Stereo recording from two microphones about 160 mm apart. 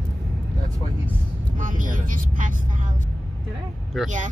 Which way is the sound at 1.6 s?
55° right (ahead or behind).